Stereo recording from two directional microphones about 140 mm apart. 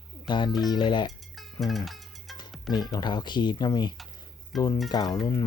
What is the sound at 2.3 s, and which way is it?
Music, 30° left (ahead or behind).